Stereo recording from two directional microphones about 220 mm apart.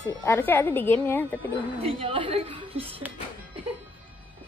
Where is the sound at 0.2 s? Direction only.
10° left (ahead or behind).